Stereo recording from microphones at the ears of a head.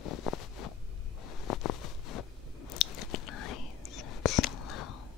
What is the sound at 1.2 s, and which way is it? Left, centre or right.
Biting, left.